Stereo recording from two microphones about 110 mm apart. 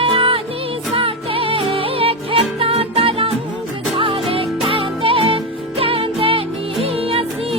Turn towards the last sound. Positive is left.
turn(degrees=-60)  # may be behind; listen again after turning